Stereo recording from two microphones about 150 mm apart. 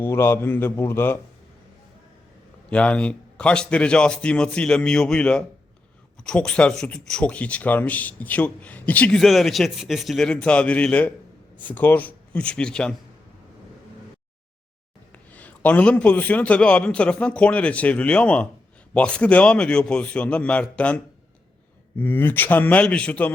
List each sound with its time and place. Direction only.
0.0 s speech: 15° left (ahead or behind)
2.6 s speech: 10° left (ahead or behind)
15.1 s speech: 10° left (ahead or behind)